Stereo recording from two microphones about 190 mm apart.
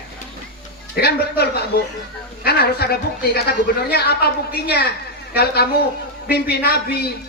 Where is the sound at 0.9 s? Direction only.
55° left (ahead or behind).